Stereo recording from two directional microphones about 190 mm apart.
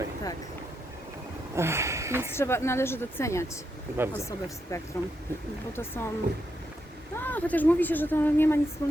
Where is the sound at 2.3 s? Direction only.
15° left (ahead or behind).